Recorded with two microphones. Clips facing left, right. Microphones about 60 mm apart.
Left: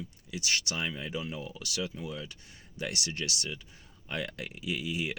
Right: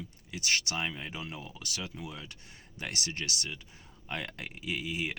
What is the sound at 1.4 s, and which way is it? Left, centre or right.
Speech, right.